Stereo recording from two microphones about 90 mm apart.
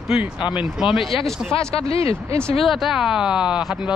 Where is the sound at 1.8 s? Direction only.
90° left.